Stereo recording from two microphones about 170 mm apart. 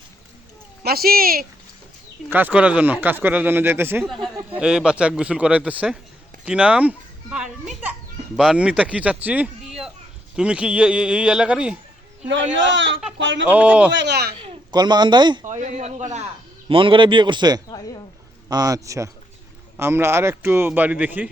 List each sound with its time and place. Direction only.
0.8 s speech: 65° right (ahead or behind)
2.3 s speech: 10° right (ahead or behind)
4.0 s a man's voice: centre (ahead or behind)
12.5 s a man's voice: 90° right
13.5 s speech: 10° right (ahead or behind)
13.9 s speech: 85° right
14.4 s speech: 25° right (ahead or behind)
15.4 s a man's voice: 45° right (ahead or behind)
16.6 s a man's voice: 30° right (ahead or behind); by 21.2 s 10° right (ahead or behind)